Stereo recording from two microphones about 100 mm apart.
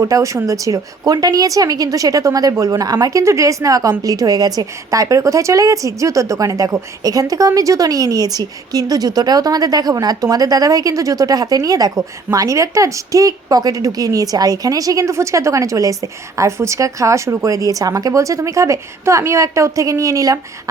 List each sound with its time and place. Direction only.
0.0 s a woman's voice: 35° right (ahead or behind)